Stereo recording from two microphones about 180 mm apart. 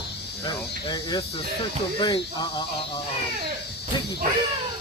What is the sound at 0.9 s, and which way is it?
Speech, 25° left (ahead or behind).